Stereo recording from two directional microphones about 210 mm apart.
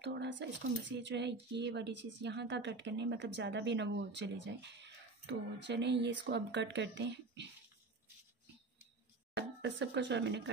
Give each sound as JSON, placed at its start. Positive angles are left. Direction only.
{"t": 0.0, "sound": "speech", "side_deg": -55}
{"t": 9.3, "sound": "speech", "side_deg": -55}